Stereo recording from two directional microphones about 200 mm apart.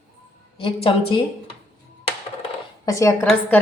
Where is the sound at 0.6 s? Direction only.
25° left (ahead or behind).